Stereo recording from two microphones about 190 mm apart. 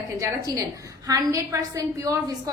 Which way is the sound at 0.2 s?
15° right (ahead or behind).